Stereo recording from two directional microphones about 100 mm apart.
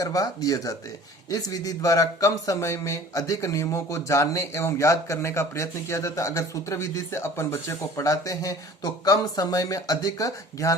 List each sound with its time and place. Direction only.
0.0 s speech: 35° left (ahead or behind)